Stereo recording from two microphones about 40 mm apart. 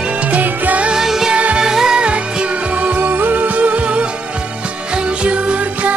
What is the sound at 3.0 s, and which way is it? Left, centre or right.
Music, right.